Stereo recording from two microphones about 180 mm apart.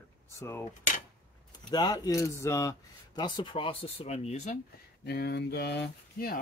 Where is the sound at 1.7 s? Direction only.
20° left (ahead or behind).